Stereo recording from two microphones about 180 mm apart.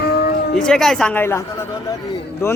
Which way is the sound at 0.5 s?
5° left (ahead or behind).